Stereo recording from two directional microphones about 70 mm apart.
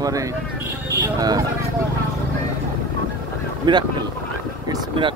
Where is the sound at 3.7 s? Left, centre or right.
Right.